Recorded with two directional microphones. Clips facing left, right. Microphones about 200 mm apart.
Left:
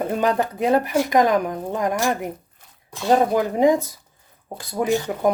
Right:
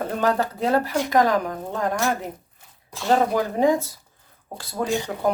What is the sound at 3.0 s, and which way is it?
Speech, 15° left (ahead or behind).